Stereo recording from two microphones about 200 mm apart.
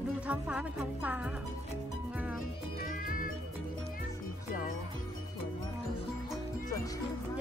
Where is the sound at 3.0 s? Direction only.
45° left (ahead or behind).